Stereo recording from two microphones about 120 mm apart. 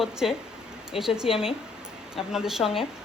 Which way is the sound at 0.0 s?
5° right (ahead or behind).